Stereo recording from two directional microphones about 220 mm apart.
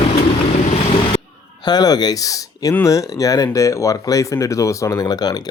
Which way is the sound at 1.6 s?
20° left (ahead or behind).